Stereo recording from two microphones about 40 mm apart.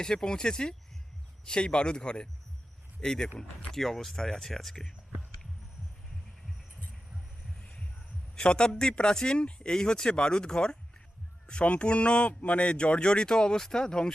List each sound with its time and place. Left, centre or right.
0.0 s a man's voice: centre
7.6 s heart sounds: left
8.4 s a man's voice: left